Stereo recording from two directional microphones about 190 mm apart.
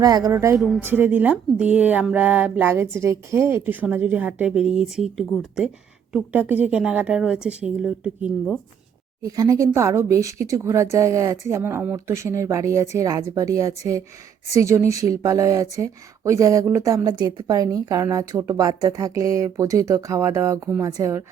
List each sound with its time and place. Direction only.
0.0 s speech: 20° right (ahead or behind)
0.5 s a woman's voice: 5° right (ahead or behind)
9.2 s speech: 20° right (ahead or behind)